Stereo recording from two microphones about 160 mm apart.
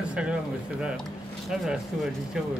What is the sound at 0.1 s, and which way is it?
Speech, 5° right (ahead or behind).